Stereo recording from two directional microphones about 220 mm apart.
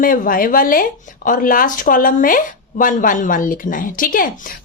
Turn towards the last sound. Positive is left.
turn(degrees=40)  # may be behind; listen again after turning